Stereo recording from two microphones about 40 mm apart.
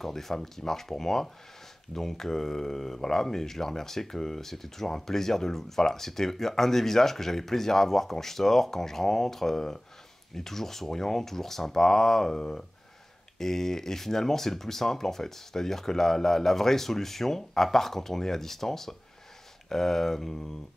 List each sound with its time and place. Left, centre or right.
0.0 s speech: centre